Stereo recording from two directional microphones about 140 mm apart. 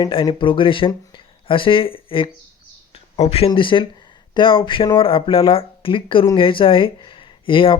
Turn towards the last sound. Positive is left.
turn(degrees=35)  # may be behind; listen again after turning